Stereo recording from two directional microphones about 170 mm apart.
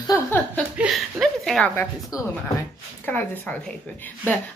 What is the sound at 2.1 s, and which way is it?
Speech, 20° left (ahead or behind).